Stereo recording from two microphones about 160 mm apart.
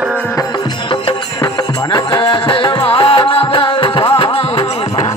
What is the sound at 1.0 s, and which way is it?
Music, 25° left (ahead or behind).